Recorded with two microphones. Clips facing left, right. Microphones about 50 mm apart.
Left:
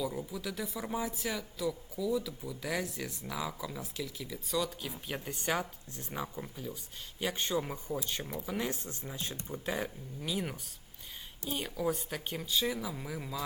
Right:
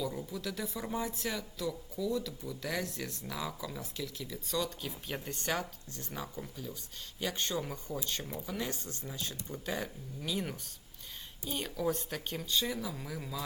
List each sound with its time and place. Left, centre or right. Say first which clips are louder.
0.0 s speech: left 1 dB; centre
10.2 s speech: even; centre